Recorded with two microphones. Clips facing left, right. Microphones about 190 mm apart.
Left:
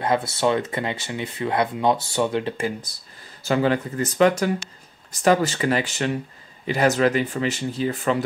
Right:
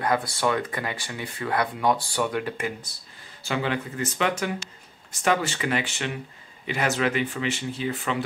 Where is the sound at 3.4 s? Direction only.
40° left (ahead or behind).